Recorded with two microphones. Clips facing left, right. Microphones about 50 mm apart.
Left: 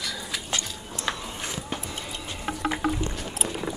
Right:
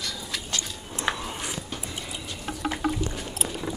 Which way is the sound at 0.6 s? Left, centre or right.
Right.